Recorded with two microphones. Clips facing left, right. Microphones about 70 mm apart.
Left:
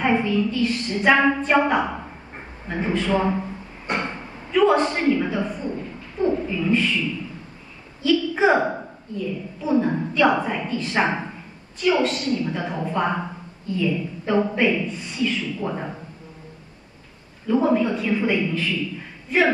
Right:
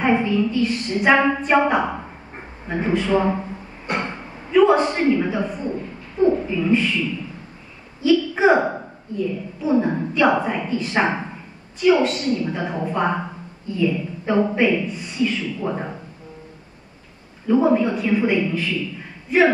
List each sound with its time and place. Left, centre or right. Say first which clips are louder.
0.0 s a man's voice: right 2 dB; centre
3.9 s a sound: right 1 dB; right
4.5 s a man's voice: right 3 dB; centre
17.5 s a man's voice: right 2 dB; centre